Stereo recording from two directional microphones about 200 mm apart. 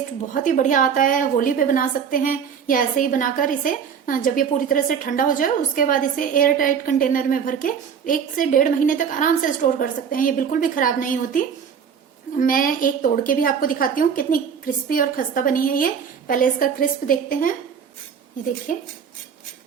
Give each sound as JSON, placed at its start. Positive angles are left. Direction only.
{"t": 0.3, "sound": "a woman's voice", "side_deg": 40}
{"t": 18.7, "sound": "a woman's voice", "side_deg": 40}